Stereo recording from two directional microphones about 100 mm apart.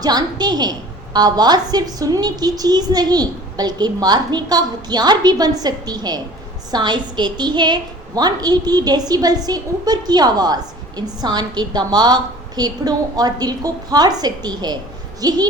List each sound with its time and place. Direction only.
0.0 s a woman's voice: 40° right (ahead or behind)